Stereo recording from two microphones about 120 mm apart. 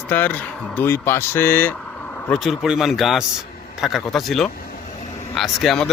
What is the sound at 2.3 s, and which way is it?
Speech, 5° right (ahead or behind).